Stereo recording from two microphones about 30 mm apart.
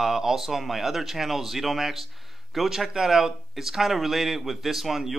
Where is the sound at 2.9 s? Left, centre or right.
Centre.